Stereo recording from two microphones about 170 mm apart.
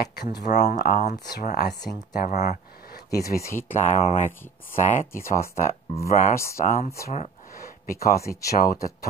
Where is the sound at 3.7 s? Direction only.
45° left (ahead or behind).